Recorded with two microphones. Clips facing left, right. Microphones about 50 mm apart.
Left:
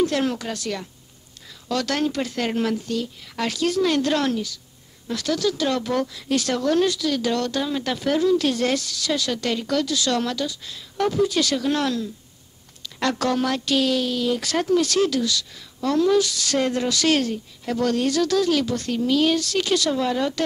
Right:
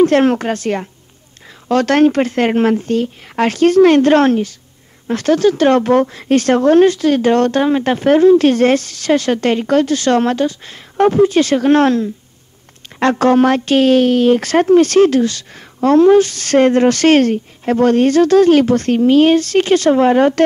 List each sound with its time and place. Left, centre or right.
0.0 s speech: right